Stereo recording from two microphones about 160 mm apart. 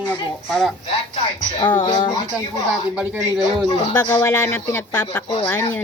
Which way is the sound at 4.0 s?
20° left (ahead or behind).